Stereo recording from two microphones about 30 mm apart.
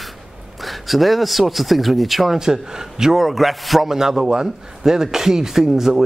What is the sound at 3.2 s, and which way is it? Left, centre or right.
Speech, centre.